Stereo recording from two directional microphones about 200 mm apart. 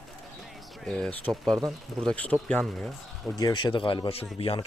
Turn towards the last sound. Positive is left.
turn(degrees=30)  # may be behind; listen again after turning